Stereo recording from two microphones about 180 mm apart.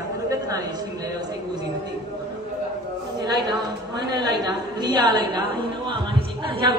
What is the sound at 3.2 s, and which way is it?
A woman's voice, 25° right (ahead or behind).